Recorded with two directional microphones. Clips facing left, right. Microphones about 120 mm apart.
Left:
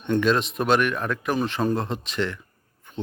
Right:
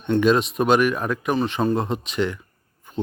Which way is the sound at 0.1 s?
5° right (ahead or behind).